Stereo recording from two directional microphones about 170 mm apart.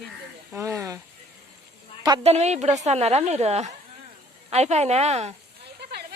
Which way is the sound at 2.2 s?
40° right (ahead or behind).